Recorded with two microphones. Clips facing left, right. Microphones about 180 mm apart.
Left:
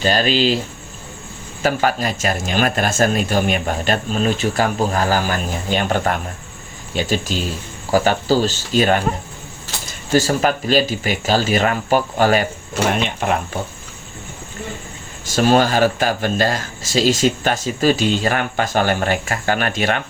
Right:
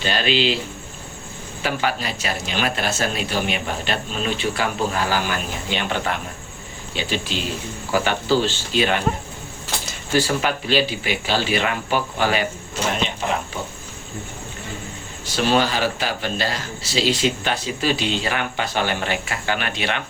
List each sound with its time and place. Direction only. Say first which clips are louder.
0.0 s speech: left 4 dB; 40° left (ahead or behind)
1.6 s speech: left 5 dB; 45° left (ahead or behind)
10.2 s speech: left 4 dB; 45° left (ahead or behind)
12.8 s speech: left 4 dB; 55° left (ahead or behind)
15.3 s speech: left 5 dB; 45° left (ahead or behind)